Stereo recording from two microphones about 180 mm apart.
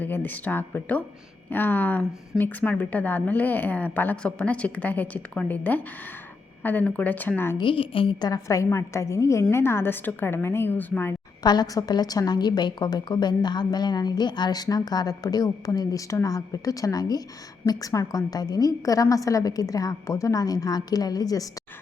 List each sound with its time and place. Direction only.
0.0 s a woman's voice: 10° left (ahead or behind)
7.6 s a woman's voice: 30° left (ahead or behind); by 11.1 s 10° left (ahead or behind)
11.4 s a woman's voice: 20° left (ahead or behind)